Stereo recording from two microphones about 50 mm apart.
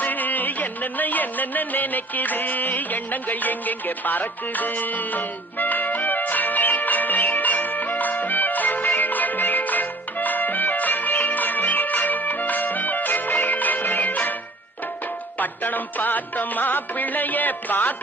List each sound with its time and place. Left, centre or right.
0.0 s music: left
15.4 s music: left